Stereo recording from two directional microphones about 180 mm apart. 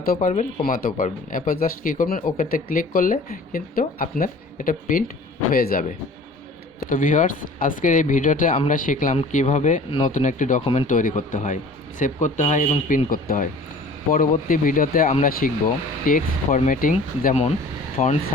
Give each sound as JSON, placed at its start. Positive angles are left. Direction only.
{"t": 0.0, "sound": "speech", "side_deg": 50}
{"t": 6.9, "sound": "speech", "side_deg": 45}
{"t": 13.1, "sound": "speech", "side_deg": 50}